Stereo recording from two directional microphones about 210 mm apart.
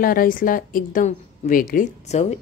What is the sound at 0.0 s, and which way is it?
A woman's voice, 40° left (ahead or behind).